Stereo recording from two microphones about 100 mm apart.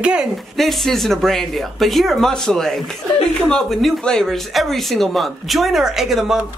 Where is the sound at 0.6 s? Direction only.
Centre (ahead or behind).